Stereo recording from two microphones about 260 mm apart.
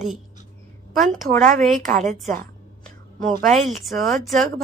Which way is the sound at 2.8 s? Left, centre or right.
Centre.